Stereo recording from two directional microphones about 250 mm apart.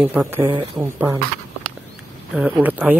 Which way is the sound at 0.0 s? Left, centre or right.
Centre.